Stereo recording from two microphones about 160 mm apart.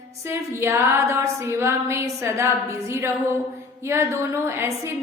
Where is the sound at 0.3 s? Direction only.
15° right (ahead or behind).